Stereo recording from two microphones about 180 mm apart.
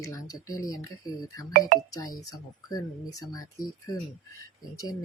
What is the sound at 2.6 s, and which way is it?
Speech, 20° left (ahead or behind).